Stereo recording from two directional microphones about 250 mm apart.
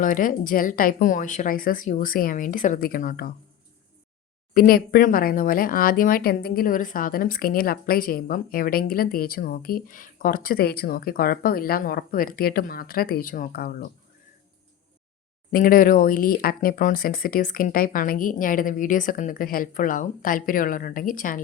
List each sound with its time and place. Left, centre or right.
0.0 s speech: left
4.5 s speech: left
15.5 s speech: left